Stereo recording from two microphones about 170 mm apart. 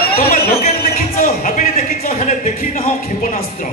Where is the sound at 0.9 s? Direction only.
55° left (ahead or behind).